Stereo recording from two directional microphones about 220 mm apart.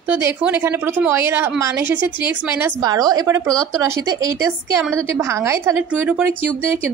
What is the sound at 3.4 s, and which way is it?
Speech, 5° left (ahead or behind).